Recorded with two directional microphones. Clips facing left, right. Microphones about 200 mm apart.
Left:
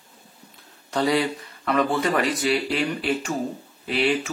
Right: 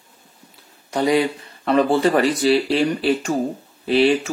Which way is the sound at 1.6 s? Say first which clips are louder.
Right 6 dB; 30° right (ahead or behind).